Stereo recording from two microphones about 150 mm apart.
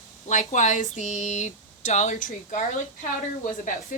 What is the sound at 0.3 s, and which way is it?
A woman's voice, 55° left (ahead or behind).